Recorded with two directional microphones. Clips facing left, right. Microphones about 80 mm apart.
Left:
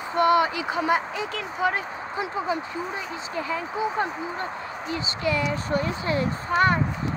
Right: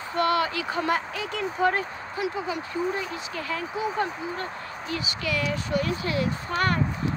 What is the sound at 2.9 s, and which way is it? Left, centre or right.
Speech, centre.